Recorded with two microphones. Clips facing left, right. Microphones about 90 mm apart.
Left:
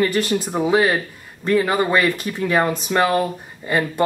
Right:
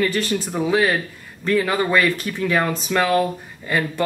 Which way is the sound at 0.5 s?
15° left (ahead or behind).